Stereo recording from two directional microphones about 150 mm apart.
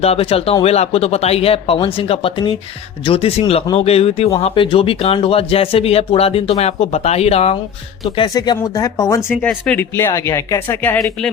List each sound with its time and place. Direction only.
0.0 s speech: 40° left (ahead or behind)
8.3 s speech: 25° left (ahead or behind)
9.4 s speech: 10° left (ahead or behind)